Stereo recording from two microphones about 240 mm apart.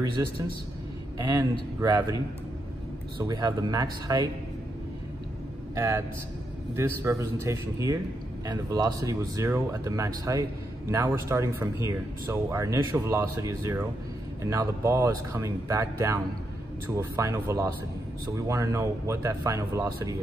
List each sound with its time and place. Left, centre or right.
0.2 s speech: centre
3.2 s speech: centre
5.8 s speech: centre